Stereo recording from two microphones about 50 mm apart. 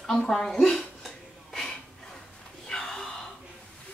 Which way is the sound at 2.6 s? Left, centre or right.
Centre.